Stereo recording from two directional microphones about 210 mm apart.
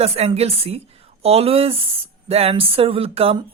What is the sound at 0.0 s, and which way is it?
A woman's voice, 30° right (ahead or behind).